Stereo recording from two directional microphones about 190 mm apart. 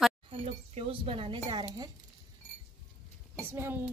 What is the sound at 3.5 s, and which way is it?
Speech, 10° right (ahead or behind).